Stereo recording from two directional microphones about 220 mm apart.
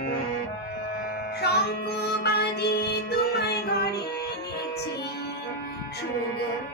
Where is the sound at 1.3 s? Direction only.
45° left (ahead or behind).